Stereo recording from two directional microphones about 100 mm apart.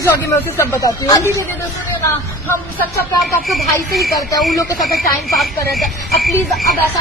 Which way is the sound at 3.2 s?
Centre (ahead or behind).